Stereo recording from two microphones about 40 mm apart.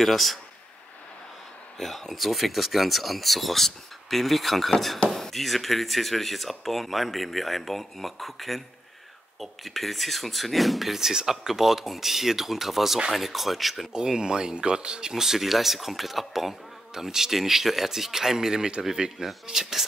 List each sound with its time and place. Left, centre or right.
0.0 s speech: centre
1.8 s speech: centre
13.9 s speech: centre